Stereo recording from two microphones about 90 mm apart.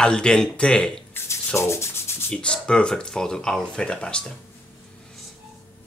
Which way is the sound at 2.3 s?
10° left (ahead or behind).